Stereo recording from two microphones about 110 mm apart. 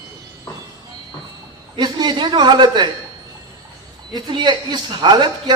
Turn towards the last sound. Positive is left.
turn(degrees=-40)  # may be behind; listen again after turning